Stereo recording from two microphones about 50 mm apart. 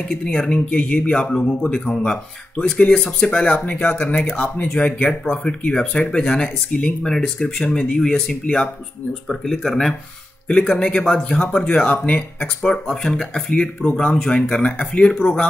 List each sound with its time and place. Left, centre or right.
0.1 s speech: centre
9.3 s speech: centre
10.5 s speech: left
12.8 s speech: centre